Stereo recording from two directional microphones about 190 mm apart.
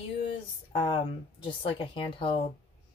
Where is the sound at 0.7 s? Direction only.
30° left (ahead or behind).